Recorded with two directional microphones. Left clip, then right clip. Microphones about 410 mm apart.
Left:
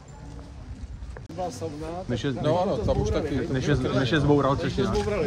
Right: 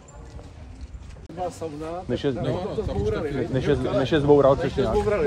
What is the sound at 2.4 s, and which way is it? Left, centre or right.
Speech, centre.